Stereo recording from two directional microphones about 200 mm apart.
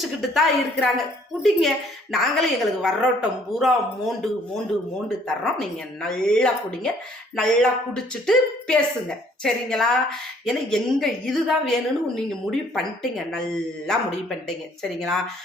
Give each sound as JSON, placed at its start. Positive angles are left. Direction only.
{"t": 0.2, "sound": "a woman's voice", "side_deg": 0}
{"t": 5.5, "sound": "a woman's voice", "side_deg": 5}